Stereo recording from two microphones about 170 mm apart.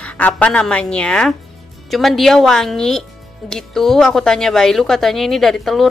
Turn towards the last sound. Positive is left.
turn(degrees=0)  # may be behind; listen again after turning